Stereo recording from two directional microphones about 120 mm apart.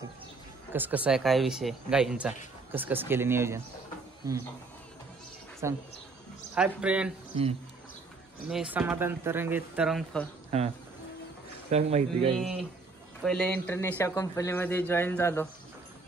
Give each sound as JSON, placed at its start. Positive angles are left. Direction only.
{"t": 0.7, "sound": "speech", "side_deg": -15}
{"t": 2.7, "sound": "speech", "side_deg": -15}
{"t": 5.6, "sound": "speech", "side_deg": -25}
{"t": 6.5, "sound": "speech", "side_deg": -10}
{"t": 7.3, "sound": "speech", "side_deg": -55}
{"t": 8.5, "sound": "speech", "side_deg": -5}
{"t": 8.7, "sound": "speech", "side_deg": -15}
{"t": 10.1, "sound": "speech", "side_deg": 10}
{"t": 10.5, "sound": "speech", "side_deg": -60}
{"t": 11.7, "sound": "speech", "side_deg": -55}
{"t": 13.2, "sound": "speech", "side_deg": 5}